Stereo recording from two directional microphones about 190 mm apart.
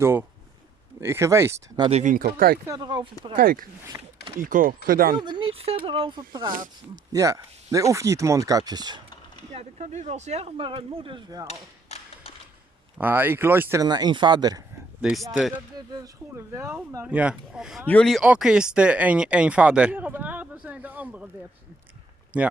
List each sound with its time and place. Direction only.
0.0 s speech: 10° right (ahead or behind)
1.9 s speech: 35° right (ahead or behind)
2.1 s speech: 50° right (ahead or behind)
2.6 s speech: 20° right (ahead or behind)
3.3 s speech: 50° right (ahead or behind)
3.9 s speech: 15° right (ahead or behind)
4.4 s speech: 45° right (ahead or behind)
5.1 s speech: 25° right (ahead or behind)
9.6 s speech: 35° right (ahead or behind)
11.4 s mechanisms: 35° left (ahead or behind)
13.0 s speech: 10° right (ahead or behind)
15.3 s speech: centre (ahead or behind)
15.9 s speech: 15° right (ahead or behind)
22.3 s speech: 5° right (ahead or behind)